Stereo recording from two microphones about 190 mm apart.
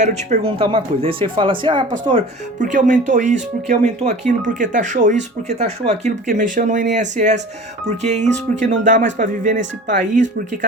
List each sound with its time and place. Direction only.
0.0 s speech: 35° right (ahead or behind)
2.6 s speech: 40° right (ahead or behind)
8.3 s speech: 70° right (ahead or behind)
8.8 s speech: 45° right (ahead or behind)